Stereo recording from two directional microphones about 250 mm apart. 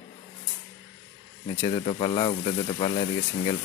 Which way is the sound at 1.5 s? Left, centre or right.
Centre.